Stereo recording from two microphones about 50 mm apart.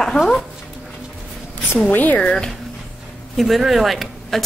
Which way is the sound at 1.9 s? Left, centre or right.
Left.